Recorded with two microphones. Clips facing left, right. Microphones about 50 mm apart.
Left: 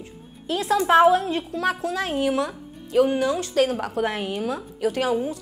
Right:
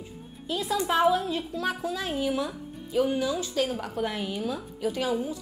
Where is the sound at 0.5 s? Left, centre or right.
Left.